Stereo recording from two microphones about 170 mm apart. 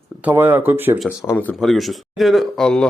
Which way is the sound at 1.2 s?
10° left (ahead or behind).